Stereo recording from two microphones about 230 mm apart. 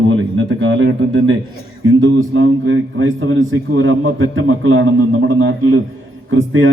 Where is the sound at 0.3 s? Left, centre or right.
Right.